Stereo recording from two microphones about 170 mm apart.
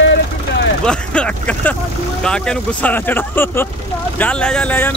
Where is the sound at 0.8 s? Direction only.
5° left (ahead or behind).